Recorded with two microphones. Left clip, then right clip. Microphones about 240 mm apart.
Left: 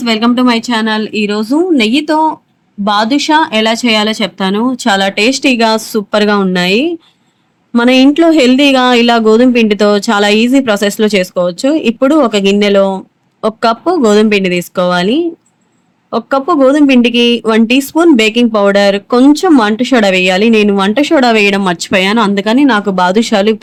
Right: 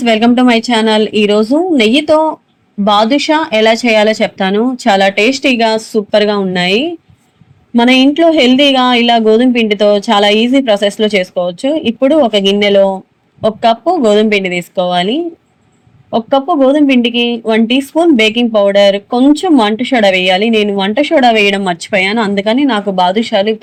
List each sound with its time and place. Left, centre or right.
0.0 s speech: centre; by 23.6 s left